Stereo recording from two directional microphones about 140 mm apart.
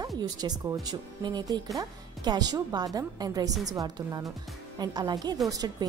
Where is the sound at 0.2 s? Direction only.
25° right (ahead or behind).